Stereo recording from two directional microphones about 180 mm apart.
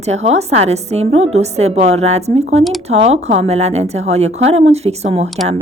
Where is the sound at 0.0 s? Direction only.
40° right (ahead or behind).